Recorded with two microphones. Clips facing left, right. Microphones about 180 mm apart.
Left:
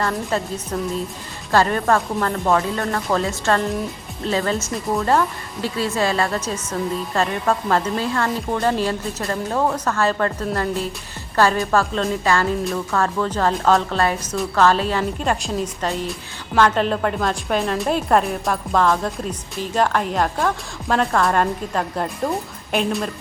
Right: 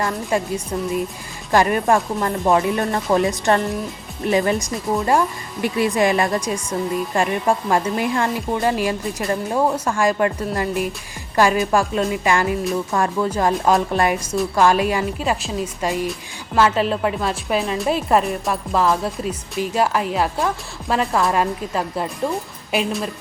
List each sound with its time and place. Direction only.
0.0 s a woman's voice: 10° right (ahead or behind)